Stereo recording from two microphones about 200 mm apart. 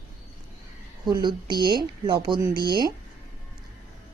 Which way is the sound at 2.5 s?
50° right (ahead or behind).